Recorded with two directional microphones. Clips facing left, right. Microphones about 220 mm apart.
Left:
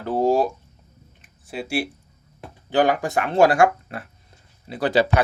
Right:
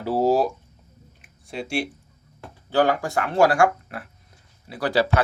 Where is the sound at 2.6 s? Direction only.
15° left (ahead or behind).